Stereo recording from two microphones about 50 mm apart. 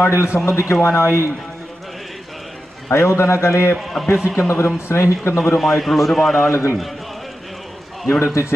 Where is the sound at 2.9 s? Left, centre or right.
Left.